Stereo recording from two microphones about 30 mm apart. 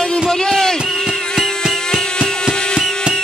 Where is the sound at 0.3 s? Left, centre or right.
Centre.